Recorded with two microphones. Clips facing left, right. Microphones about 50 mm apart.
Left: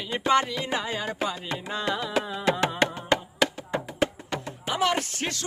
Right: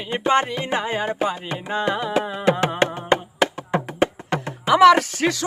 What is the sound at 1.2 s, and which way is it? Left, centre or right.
Carnatic music, right.